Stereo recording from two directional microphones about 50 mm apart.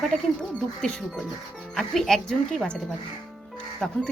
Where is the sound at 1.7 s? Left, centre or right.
Centre.